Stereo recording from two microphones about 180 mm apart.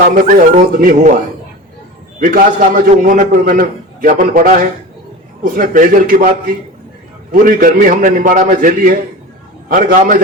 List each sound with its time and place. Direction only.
0.0 s a man's voice: 50° right (ahead or behind)
2.2 s a man's voice: 50° right (ahead or behind)